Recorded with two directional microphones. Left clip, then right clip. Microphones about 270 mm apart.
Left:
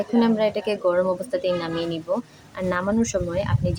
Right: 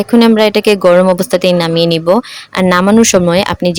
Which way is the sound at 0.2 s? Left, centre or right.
Right.